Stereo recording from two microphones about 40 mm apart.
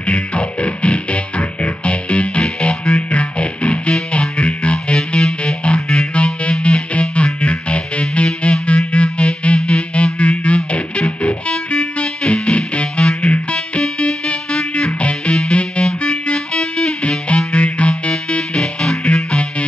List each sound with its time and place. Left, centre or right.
0.0 s music: left
18.6 s music: centre